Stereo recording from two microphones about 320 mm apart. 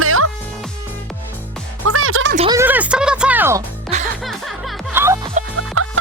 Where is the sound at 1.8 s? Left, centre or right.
Right.